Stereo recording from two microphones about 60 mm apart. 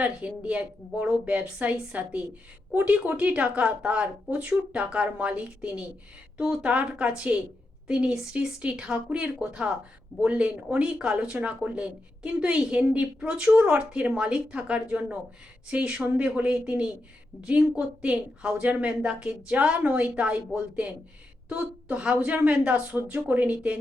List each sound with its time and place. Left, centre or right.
0.0 s a woman's voice: right